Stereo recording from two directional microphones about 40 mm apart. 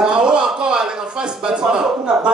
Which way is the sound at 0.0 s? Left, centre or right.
Centre.